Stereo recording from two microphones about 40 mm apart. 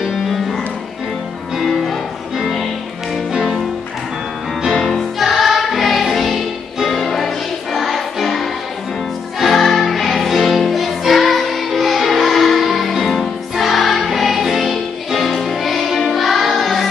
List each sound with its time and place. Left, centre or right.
0.0 s music: centre
1.6 s music: centre
4.7 s music: centre